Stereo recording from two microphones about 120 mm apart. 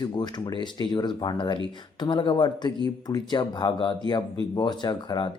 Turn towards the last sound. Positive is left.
turn(degrees=35)  # may be behind; listen again after turning